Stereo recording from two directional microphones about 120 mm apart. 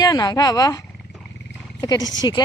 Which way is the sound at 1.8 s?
30° left (ahead or behind).